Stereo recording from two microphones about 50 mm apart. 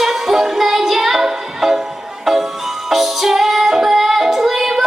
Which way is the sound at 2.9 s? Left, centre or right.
Centre.